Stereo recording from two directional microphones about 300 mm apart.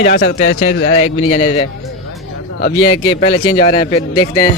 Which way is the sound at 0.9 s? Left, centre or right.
Left.